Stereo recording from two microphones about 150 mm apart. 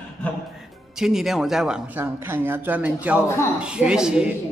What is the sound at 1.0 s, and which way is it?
A man's voice, centre (ahead or behind).